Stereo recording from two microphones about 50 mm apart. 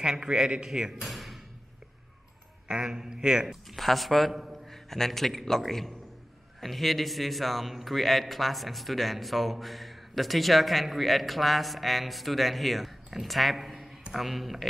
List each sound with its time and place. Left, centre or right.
0.0 s a man's voice: centre
1.0 s a sound: centre
2.7 s a man's voice: centre
3.4 s a man's voice: centre
4.6 s a man's voice: centre